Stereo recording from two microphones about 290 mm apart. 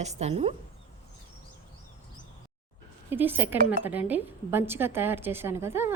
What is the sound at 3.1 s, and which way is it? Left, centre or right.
Speech, centre.